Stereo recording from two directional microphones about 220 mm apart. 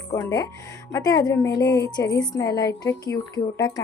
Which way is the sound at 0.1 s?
15° left (ahead or behind).